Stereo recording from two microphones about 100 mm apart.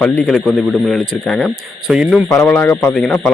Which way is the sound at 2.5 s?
20° left (ahead or behind).